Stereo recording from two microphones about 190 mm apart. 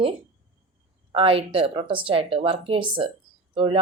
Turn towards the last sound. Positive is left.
turn(degrees=-30)  # may be behind; listen again after turning